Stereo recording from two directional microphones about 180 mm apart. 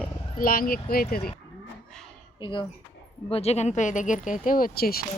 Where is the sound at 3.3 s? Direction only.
35° left (ahead or behind); by 5.0 s 55° left (ahead or behind).